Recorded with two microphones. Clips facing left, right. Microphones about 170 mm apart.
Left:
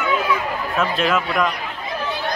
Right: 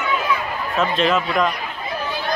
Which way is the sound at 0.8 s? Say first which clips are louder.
Right 2 dB; 5° left (ahead or behind).